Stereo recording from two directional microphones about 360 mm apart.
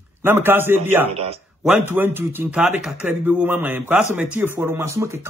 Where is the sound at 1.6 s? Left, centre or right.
Centre.